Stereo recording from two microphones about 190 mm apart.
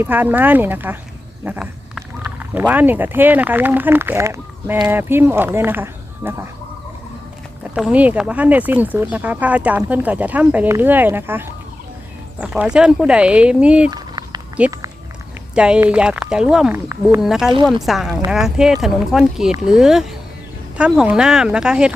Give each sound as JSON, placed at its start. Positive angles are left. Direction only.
{"t": 0.0, "sound": "speech", "side_deg": -10}
{"t": 7.8, "sound": "speech", "side_deg": -5}
{"t": 13.9, "sound": "a sound", "side_deg": -20}
{"t": 15.5, "sound": "speech", "side_deg": -5}